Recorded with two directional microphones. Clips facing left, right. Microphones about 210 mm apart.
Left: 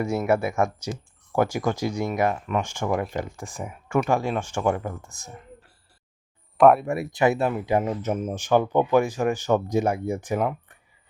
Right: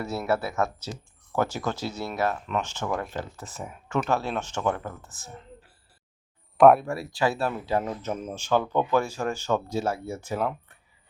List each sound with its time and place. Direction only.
0.3 s speech: 15° left (ahead or behind)
6.6 s speech: centre (ahead or behind)
6.8 s speech: 20° left (ahead or behind)
10.4 s speech: 5° left (ahead or behind)